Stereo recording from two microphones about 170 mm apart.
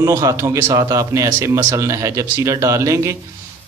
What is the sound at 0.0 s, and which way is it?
Speech, 20° right (ahead or behind).